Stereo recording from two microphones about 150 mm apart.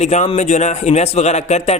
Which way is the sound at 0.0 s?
50° left (ahead or behind).